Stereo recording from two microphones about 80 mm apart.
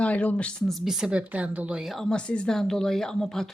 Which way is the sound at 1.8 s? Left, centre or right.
Centre.